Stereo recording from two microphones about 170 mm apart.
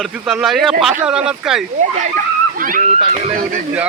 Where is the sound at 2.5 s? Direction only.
55° right (ahead or behind).